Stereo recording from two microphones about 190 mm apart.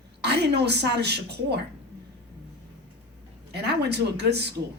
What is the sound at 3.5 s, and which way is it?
Speech, 60° right (ahead or behind).